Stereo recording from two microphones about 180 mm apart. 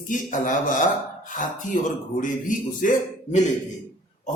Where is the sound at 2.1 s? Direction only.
45° left (ahead or behind).